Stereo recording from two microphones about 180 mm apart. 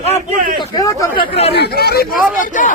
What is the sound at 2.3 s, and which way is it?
Speech, 45° left (ahead or behind).